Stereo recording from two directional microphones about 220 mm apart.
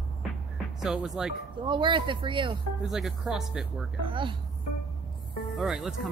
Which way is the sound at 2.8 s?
Centre (ahead or behind).